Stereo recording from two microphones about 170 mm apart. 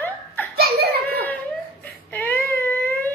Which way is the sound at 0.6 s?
65° right (ahead or behind).